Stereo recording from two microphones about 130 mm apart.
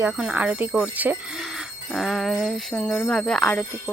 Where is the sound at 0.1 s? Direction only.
5° right (ahead or behind).